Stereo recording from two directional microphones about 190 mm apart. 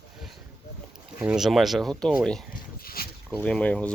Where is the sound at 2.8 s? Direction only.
50° left (ahead or behind).